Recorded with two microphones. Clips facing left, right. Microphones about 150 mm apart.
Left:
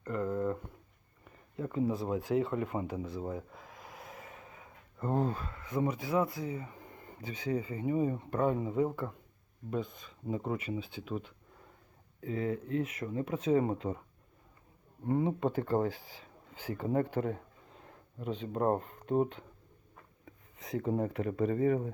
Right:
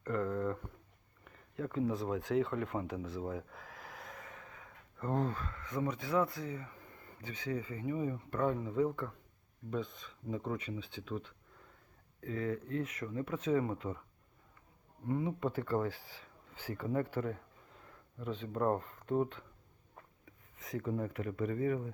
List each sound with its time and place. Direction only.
0.0 s a sound: 5° left (ahead or behind)
5.1 s speech: 10° left (ahead or behind)
6.7 s a sound: 20° left (ahead or behind)
7.6 s speech: 20° left (ahead or behind)
8.4 s speech: 15° left (ahead or behind)
13.5 s speech: 25° left (ahead or behind)
15.0 s speech: 35° left (ahead or behind)
20.7 s speech: 25° left (ahead or behind)